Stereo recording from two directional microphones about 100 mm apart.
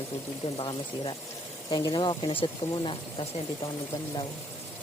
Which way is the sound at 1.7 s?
40° left (ahead or behind).